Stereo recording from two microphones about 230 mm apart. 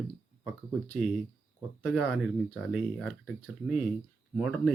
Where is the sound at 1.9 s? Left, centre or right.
Centre.